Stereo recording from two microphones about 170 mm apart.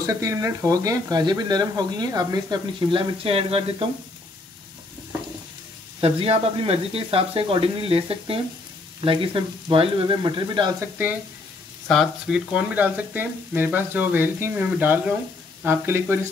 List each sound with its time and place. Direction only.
0.0 s speech: 20° right (ahead or behind); by 3.9 s 35° right (ahead or behind)
5.9 s speech: 35° right (ahead or behind)
10.8 s frying: 10° right (ahead or behind)
11.9 s frying: centre (ahead or behind)